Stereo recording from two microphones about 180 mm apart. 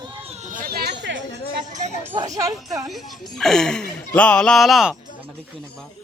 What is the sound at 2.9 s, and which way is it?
Speech, centre (ahead or behind).